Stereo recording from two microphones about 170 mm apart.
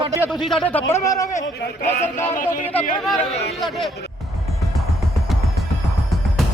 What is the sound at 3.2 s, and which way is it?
Speech, 40° left (ahead or behind).